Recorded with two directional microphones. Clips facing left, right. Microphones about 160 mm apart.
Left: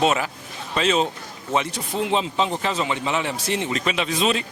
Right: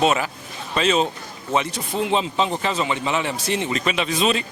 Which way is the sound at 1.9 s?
45° right (ahead or behind).